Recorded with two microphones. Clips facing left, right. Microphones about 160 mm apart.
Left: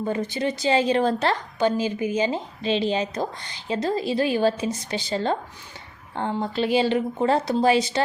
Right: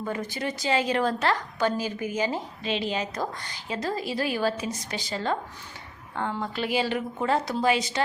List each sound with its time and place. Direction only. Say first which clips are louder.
0.0 s a woman's voice: left 5 dB; 25° left (ahead or behind)